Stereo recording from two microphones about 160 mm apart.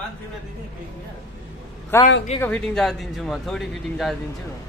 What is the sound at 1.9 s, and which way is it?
A man's voice, 15° left (ahead or behind).